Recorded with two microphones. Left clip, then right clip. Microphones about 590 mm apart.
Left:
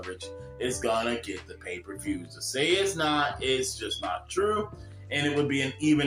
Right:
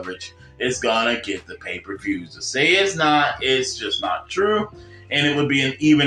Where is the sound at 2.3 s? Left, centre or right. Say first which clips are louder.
Right 9 dB; left.